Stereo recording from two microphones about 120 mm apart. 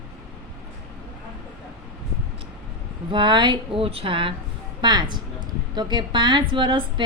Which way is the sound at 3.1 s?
40° right (ahead or behind).